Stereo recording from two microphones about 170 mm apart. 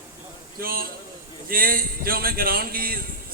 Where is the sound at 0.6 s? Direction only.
60° right (ahead or behind).